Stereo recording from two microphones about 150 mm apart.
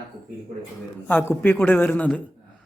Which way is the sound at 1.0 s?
10° left (ahead or behind).